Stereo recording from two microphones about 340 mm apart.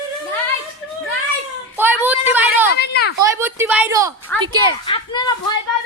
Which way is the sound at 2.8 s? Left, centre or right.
Left.